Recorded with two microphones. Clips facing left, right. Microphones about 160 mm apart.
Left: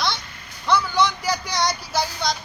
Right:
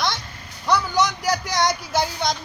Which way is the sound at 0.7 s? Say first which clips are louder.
Even; 40° right (ahead or behind).